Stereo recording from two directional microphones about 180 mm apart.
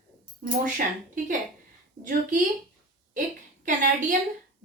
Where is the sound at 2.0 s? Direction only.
45° right (ahead or behind).